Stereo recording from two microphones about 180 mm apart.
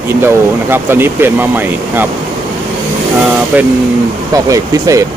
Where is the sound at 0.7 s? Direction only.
10° right (ahead or behind).